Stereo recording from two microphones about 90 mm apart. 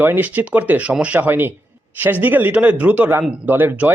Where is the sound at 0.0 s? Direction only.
20° right (ahead or behind).